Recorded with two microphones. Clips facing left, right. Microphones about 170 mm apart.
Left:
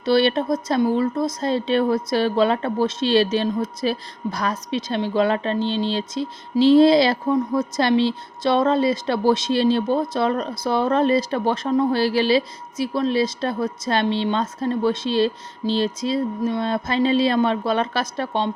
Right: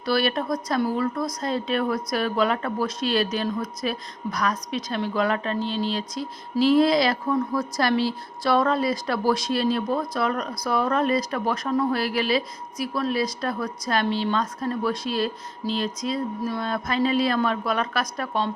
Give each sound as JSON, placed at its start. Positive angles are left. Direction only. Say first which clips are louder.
{"t": 0.0, "sound": "speech", "louder": "left 5 dB", "side_deg": 25}